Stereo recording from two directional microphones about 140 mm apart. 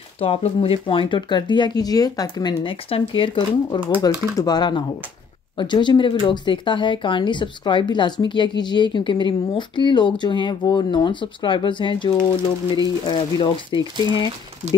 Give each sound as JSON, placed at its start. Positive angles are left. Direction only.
{"t": 0.2, "sound": "speech", "side_deg": 45}